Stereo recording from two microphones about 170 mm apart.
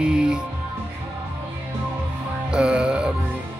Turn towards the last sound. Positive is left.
turn(degrees=-5)  # may be behind; listen again after turning